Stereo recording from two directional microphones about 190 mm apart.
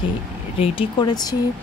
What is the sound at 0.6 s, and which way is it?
Speech, 30° left (ahead or behind).